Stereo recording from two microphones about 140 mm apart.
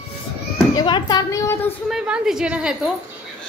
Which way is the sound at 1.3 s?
20° left (ahead or behind).